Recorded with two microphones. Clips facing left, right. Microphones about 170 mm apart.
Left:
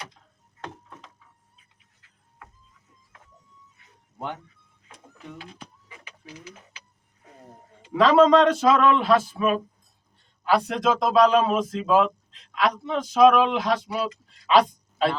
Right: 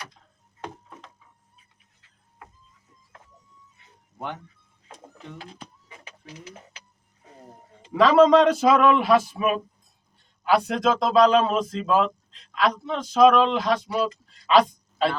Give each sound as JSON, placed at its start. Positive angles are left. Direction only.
{"t": 5.4, "sound": "speech", "side_deg": -35}
{"t": 7.9, "sound": "a man's voice", "side_deg": 0}
{"t": 10.4, "sound": "a man's voice", "side_deg": 0}